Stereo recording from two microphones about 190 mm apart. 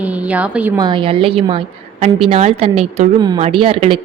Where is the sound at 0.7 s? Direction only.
25° right (ahead or behind).